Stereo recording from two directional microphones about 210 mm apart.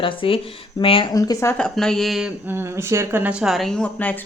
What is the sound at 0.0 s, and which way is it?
Speech, 25° left (ahead or behind).